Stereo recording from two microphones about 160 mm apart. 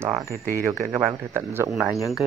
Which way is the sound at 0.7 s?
15° right (ahead or behind).